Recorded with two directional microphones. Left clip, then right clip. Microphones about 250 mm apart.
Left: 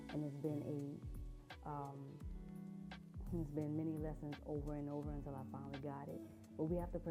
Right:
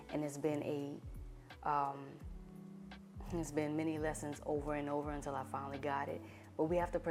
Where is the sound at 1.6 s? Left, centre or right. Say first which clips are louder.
Right 13 dB; centre.